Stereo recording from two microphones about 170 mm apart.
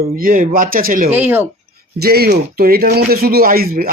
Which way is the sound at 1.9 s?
65° right (ahead or behind).